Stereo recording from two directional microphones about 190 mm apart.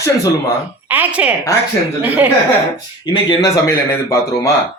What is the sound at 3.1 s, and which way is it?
A man's voice, 25° left (ahead or behind).